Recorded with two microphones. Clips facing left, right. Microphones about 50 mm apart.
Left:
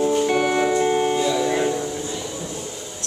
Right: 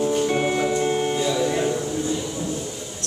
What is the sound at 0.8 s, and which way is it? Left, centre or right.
Music, centre.